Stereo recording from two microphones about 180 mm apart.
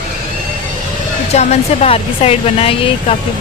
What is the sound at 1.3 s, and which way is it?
Speech, 35° left (ahead or behind).